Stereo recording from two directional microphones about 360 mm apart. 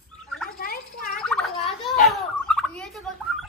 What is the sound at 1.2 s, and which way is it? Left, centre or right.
Gargling, centre.